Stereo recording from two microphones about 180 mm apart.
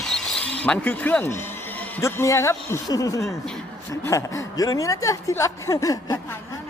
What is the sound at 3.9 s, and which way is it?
A woman's voice, 15° left (ahead or behind).